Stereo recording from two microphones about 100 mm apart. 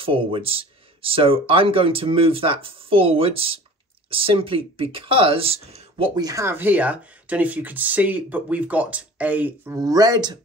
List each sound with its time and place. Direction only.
0.0 s speech: 65° right (ahead or behind)
6.1 s speech: 40° right (ahead or behind)
6.4 s speech: 20° right (ahead or behind)
9.7 s speech: 35° right (ahead or behind)